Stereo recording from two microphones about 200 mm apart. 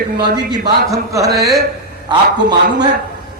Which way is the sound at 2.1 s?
20° right (ahead or behind).